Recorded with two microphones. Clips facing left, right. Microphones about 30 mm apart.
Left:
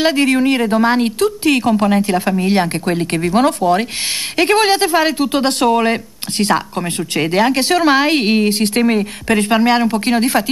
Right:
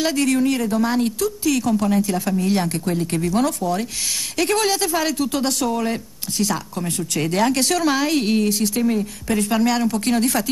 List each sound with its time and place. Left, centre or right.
0.0 s speech: left